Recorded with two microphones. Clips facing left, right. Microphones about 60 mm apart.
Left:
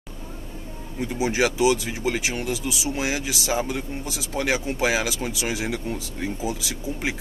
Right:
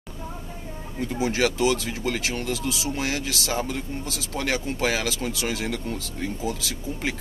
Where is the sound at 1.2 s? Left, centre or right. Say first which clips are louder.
Left 2 dB; centre.